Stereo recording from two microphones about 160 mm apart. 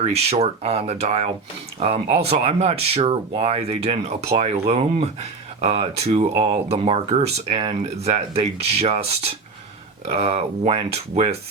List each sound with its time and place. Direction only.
0.0 s speech: 40° right (ahead or behind)